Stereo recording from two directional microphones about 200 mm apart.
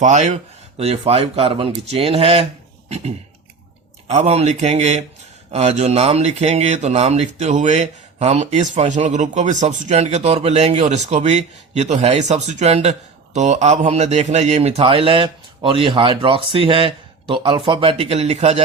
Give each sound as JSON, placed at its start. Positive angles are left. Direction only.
{"t": 0.0, "sound": "speech", "side_deg": -35}
{"t": 4.1, "sound": "speech", "side_deg": -35}